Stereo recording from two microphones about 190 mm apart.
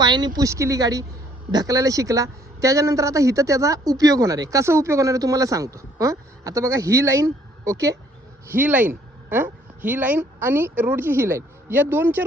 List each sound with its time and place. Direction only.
0.0 s a woman's voice: 20° right (ahead or behind)